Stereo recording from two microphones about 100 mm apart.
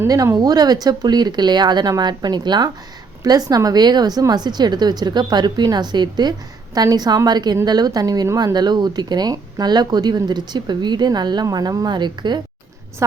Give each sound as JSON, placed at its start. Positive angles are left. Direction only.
{"t": 0.3, "sound": "a woman's voice", "side_deg": -40}